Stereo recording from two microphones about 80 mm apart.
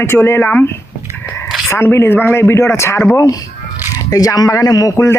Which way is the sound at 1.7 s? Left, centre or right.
Left.